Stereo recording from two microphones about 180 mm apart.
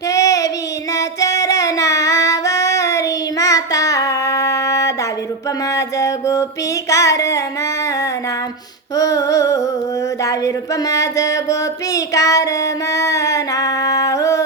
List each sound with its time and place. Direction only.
0.1 s child singing: 20° left (ahead or behind)
0.9 s singing: 20° left (ahead or behind)
5.7 s mantra: 20° left (ahead or behind)
6.9 s music: 20° left (ahead or behind)
9.0 s female singing: 20° left (ahead or behind)
10.2 s music: 20° left (ahead or behind)